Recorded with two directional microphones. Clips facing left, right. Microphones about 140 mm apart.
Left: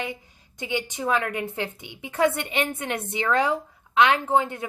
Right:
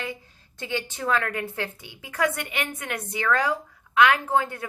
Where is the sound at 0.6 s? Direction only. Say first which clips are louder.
Left 2 dB; 15° left (ahead or behind).